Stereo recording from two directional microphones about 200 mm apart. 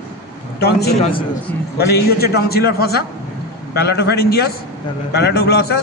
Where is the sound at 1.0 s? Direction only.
35° left (ahead or behind).